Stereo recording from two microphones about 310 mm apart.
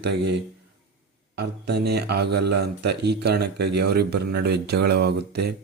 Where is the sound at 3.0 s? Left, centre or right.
Right.